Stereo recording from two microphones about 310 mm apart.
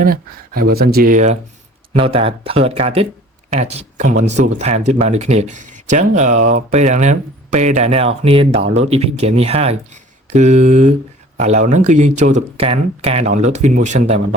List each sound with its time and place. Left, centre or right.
0.0 s speech: right